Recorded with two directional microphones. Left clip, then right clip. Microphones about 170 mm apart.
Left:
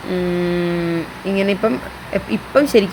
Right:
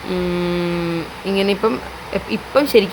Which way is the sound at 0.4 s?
5° right (ahead or behind).